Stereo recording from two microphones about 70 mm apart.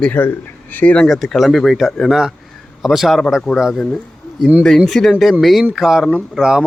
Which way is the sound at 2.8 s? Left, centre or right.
Centre.